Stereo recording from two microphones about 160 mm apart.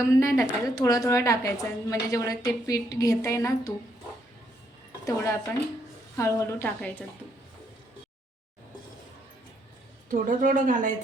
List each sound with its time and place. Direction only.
0.1 s a woman's voice: 20° left (ahead or behind)
5.0 s a woman's voice: 20° left (ahead or behind)
10.1 s speech: 55° right (ahead or behind)